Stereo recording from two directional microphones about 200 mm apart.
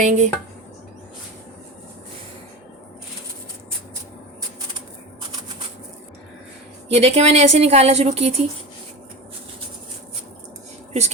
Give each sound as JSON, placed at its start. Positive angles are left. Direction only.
{"t": 0.0, "sound": "a woman's voice", "side_deg": -40}
{"t": 6.9, "sound": "a woman's voice", "side_deg": -30}